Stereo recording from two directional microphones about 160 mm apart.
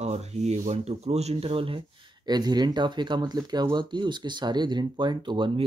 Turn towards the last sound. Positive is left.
turn(degrees=-30)  # may be behind; listen again after turning